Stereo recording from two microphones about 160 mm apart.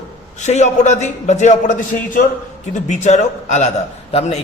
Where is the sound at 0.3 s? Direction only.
45° left (ahead or behind).